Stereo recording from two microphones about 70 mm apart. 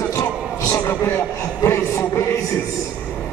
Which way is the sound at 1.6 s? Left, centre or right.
Left.